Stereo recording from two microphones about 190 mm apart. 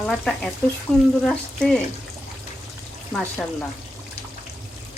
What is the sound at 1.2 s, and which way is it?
Speech, 5° left (ahead or behind).